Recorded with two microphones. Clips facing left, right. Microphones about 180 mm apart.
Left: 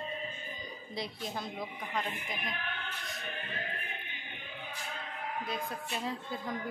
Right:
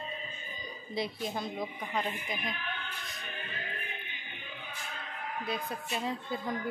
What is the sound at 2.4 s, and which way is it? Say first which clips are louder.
Speech: right 1 dB; 55° left (ahead or behind).